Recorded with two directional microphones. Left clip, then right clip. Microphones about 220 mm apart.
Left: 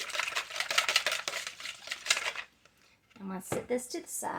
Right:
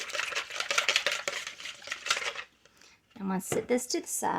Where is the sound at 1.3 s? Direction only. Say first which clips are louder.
Right 1 dB; centre (ahead or behind).